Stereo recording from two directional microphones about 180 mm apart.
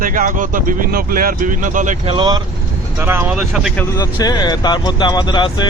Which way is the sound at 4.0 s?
20° left (ahead or behind).